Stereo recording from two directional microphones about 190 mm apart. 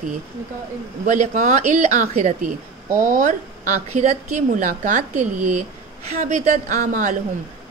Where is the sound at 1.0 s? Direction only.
40° right (ahead or behind).